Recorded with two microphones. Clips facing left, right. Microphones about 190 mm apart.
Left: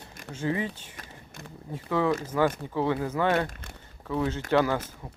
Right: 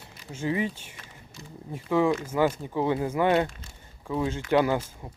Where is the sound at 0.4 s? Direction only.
20° right (ahead or behind).